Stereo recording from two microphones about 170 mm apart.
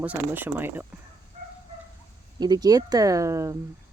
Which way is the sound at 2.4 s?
25° right (ahead or behind).